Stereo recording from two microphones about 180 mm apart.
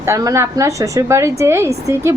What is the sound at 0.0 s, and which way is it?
Speech, 15° right (ahead or behind).